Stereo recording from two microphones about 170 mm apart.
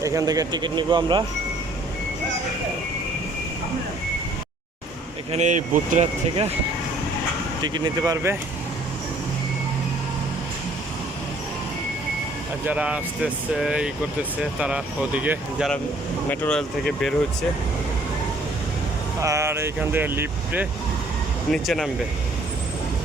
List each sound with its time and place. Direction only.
0.0 s speech: 20° right (ahead or behind)
5.3 s speech: 45° right (ahead or behind)
7.6 s speech: 25° right (ahead or behind)
12.6 s speech: 10° right (ahead or behind)
16.3 s speech: 10° left (ahead or behind)
19.2 s speech: 15° right (ahead or behind)
21.5 s speech: centre (ahead or behind)